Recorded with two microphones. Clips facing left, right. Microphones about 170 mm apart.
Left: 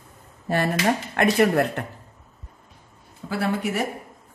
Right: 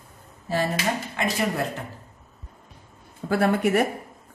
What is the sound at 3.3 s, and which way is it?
Speech, 55° right (ahead or behind).